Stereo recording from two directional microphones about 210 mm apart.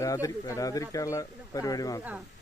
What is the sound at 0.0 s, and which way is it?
Speech, 15° left (ahead or behind).